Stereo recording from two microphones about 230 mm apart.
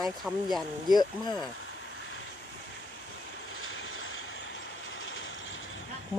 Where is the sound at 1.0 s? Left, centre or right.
Centre.